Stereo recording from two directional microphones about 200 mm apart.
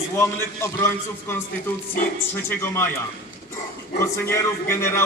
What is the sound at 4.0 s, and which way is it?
A man's voice, 15° left (ahead or behind).